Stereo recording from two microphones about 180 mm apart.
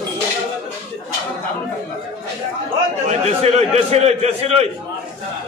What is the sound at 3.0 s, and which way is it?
A man's voice, 35° right (ahead or behind).